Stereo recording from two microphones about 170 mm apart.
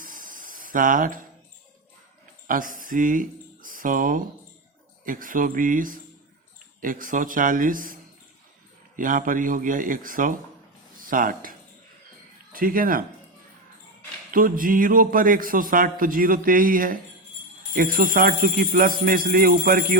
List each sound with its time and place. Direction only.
0.0 s a sound: 55° right (ahead or behind)
2.5 s speech: 55° right (ahead or behind)
9.0 s speech: 55° right (ahead or behind)
12.5 s a man's voice: 55° right (ahead or behind)
14.3 s a man's voice: 55° right (ahead or behind)